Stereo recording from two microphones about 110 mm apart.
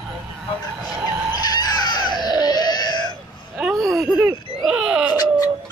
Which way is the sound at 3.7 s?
Centre (ahead or behind).